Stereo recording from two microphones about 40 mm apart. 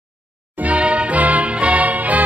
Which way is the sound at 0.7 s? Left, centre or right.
Right.